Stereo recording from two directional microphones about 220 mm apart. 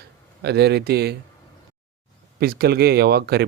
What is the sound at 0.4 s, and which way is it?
Speech, 50° right (ahead or behind).